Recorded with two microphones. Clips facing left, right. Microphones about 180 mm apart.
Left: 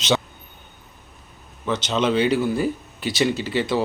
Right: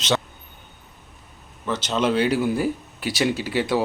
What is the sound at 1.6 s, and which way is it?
Speech, centre (ahead or behind).